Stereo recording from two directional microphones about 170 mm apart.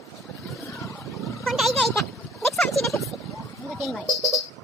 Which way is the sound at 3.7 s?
Centre (ahead or behind).